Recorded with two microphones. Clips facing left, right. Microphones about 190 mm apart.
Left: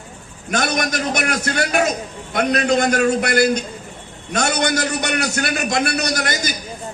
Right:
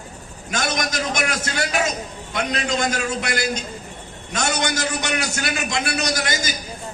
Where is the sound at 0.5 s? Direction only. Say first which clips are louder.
Left 4 dB; 60° left (ahead or behind).